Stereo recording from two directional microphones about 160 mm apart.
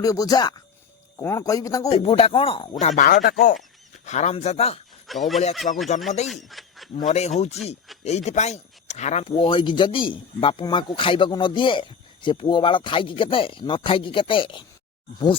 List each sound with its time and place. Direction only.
0.0 s a man's voice: 20° left (ahead or behind)
1.9 s speech: 40° left (ahead or behind)
2.8 s speech: 50° left (ahead or behind)
5.1 s speech: centre (ahead or behind)
5.7 s speech: 45° left (ahead or behind)
6.2 s speech: centre (ahead or behind)
6.9 s speech: 45° left (ahead or behind)